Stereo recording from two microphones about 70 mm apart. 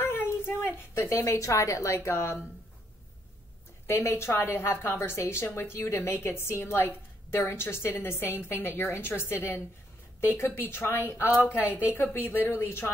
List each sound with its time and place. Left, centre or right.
0.0 s a sound: left
0.9 s a woman's voice: left
3.8 s a woman's voice: left
11.5 s speech: right
11.9 s a woman's voice: left